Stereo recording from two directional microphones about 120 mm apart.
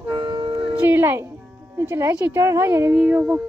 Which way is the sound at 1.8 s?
25° right (ahead or behind).